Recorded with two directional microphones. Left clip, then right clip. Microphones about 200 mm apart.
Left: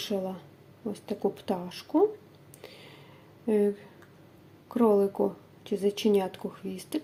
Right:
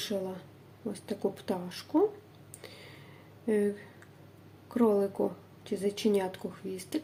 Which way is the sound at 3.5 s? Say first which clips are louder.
Left 3 dB; 15° left (ahead or behind).